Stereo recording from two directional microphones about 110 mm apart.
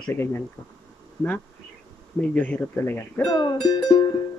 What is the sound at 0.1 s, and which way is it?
Speech, 20° left (ahead or behind).